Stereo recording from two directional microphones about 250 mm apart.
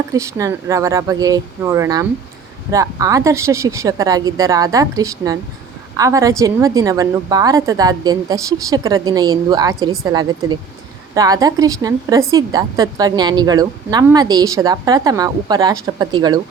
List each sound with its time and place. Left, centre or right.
0.1 s a woman's voice: centre